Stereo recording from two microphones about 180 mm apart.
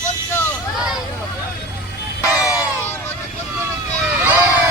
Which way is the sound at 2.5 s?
20° left (ahead or behind).